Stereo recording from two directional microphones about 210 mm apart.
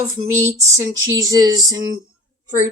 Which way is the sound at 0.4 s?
15° right (ahead or behind).